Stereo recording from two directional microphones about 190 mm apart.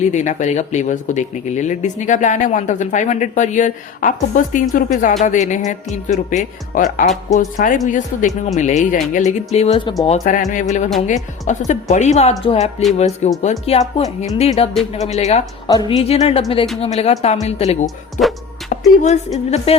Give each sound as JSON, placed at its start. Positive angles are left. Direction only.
{"t": 0.0, "sound": "speech", "side_deg": 40}
{"t": 10.1, "sound": "speech", "side_deg": 45}
{"t": 15.6, "sound": "a woman's voice", "side_deg": 20}
{"t": 16.0, "sound": "speech", "side_deg": 35}
{"t": 17.8, "sound": "speech", "side_deg": 0}
{"t": 19.0, "sound": "speech", "side_deg": 35}